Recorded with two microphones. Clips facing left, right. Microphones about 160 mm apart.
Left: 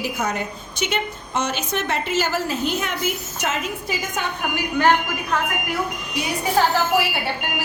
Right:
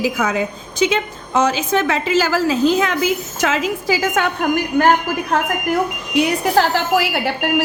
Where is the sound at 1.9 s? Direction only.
90° right.